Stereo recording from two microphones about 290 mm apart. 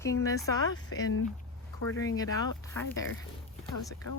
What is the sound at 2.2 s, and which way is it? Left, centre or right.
Speech, centre.